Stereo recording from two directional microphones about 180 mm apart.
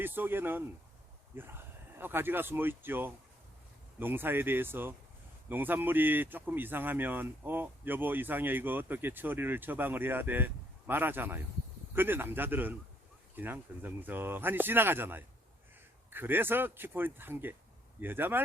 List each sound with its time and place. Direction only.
0.0 s speech: 10° right (ahead or behind)